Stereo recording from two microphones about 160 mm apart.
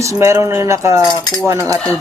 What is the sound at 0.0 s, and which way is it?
Speech, 20° right (ahead or behind).